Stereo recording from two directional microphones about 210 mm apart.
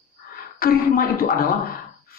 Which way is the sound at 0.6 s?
45° left (ahead or behind).